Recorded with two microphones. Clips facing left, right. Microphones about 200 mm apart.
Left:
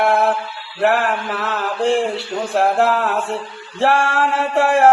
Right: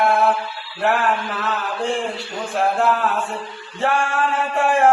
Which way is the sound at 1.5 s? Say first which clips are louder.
Left 8 dB; 80° left.